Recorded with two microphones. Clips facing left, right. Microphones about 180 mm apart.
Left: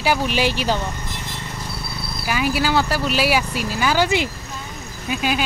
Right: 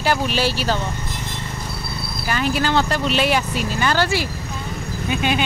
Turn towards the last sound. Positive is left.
turn(degrees=5)  # may be behind; listen again after turning